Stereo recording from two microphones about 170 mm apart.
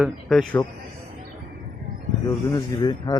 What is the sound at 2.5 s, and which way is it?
Speech, 25° left (ahead or behind).